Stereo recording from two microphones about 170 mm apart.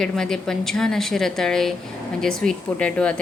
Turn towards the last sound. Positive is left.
turn(degrees=5)  # may be behind; listen again after turning